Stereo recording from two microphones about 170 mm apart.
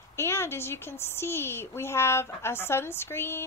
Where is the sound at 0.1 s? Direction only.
15° left (ahead or behind).